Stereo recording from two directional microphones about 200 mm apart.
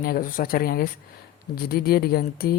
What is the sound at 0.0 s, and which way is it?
Speech, 45° left (ahead or behind).